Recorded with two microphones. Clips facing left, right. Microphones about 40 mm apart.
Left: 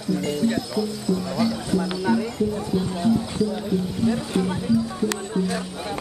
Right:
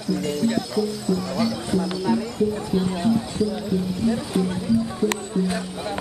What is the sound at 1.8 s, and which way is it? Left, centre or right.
Music, centre.